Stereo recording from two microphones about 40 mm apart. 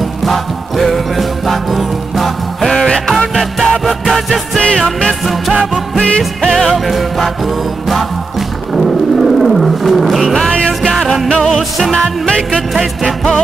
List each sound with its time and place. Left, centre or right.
0.2 s music: centre
5.9 s music: left
6.5 s music: centre
8.7 s wild animals: centre
10.8 s music: centre